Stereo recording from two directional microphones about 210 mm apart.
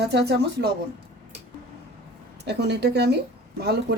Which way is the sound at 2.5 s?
55° right (ahead or behind).